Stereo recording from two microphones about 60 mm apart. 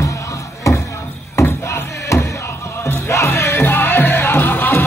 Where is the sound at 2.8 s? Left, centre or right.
Left.